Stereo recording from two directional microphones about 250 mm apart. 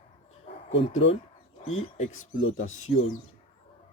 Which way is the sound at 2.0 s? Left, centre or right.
Left.